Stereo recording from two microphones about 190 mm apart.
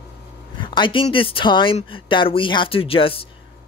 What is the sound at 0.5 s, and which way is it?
Speech, 25° left (ahead or behind).